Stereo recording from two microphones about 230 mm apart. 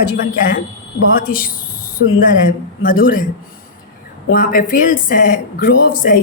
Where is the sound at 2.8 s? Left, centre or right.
Left.